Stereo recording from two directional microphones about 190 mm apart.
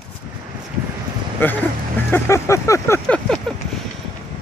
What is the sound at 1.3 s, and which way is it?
Speech, 10° left (ahead or behind).